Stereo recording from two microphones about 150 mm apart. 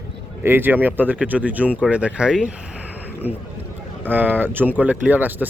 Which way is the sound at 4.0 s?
10° right (ahead or behind).